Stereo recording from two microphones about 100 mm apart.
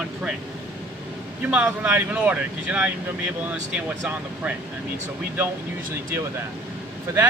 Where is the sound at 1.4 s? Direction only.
10° right (ahead or behind).